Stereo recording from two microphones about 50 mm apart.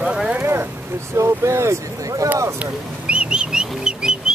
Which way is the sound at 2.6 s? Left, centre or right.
Right.